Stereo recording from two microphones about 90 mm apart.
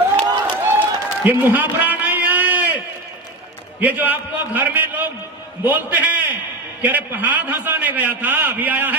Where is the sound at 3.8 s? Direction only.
20° right (ahead or behind).